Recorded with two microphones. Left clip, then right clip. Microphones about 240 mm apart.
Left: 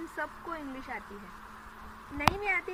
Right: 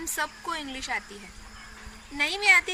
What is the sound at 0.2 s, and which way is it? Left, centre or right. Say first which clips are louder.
Speech: right 7 dB; right.